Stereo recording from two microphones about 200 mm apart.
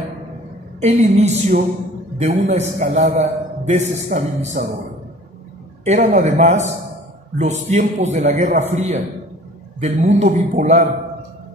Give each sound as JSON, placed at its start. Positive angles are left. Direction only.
{"t": 0.7, "sound": "a man's voice", "side_deg": -35}
{"t": 5.9, "sound": "a man's voice", "side_deg": -35}